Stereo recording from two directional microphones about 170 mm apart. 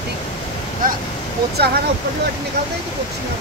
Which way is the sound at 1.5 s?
70° right (ahead or behind).